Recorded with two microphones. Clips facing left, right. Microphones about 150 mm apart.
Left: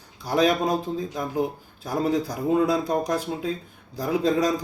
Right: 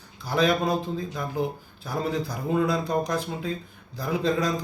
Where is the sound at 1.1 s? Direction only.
40° left (ahead or behind).